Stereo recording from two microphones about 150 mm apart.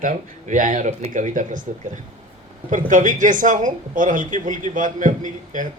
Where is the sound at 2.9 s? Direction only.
60° right (ahead or behind).